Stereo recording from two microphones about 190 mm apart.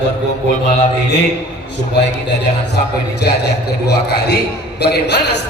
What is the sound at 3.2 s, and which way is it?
A man's voice, 60° left (ahead or behind).